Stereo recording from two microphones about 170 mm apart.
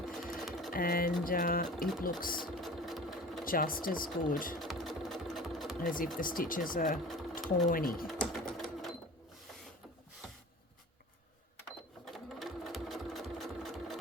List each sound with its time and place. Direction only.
0.0 s sewing machine: centre (ahead or behind)
0.7 s speech: 55° left (ahead or behind)
2.4 s sewing machine: centre (ahead or behind)
3.4 s speech: 55° left (ahead or behind)
4.6 s sewing machine: centre (ahead or behind)
5.8 s speech: 55° left (ahead or behind)
8.0 s sewing machine: centre (ahead or behind)
12.1 s sewing machine: centre (ahead or behind)